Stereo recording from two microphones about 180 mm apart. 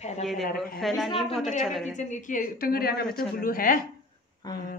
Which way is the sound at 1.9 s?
45° left (ahead or behind).